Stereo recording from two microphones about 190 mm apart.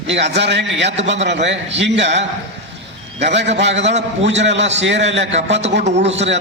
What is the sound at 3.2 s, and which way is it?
A man's voice, 65° right (ahead or behind).